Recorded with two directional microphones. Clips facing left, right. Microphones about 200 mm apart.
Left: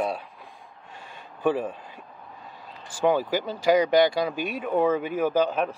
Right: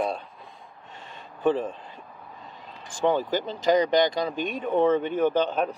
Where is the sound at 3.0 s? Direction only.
10° left (ahead or behind).